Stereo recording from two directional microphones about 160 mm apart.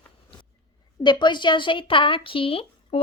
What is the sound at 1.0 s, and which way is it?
A woman's voice, 30° left (ahead or behind).